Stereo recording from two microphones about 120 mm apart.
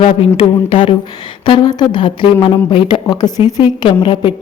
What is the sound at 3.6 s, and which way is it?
Speech, 45° left (ahead or behind).